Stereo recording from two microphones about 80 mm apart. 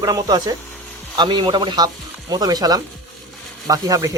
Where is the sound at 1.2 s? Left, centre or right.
Right.